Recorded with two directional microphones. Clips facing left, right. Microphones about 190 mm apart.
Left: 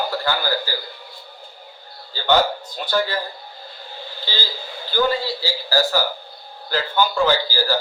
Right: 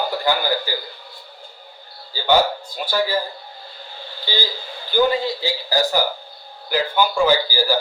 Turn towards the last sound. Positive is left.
turn(degrees=-10)  # may be behind; listen again after turning